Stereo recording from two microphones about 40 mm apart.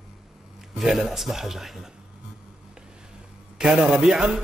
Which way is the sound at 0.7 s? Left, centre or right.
Centre.